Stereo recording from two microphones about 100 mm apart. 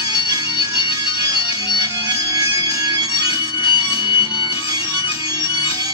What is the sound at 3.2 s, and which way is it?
Music, 60° left (ahead or behind).